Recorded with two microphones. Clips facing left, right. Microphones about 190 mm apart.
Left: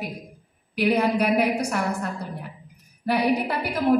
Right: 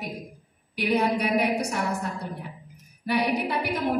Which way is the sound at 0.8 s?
65° left (ahead or behind).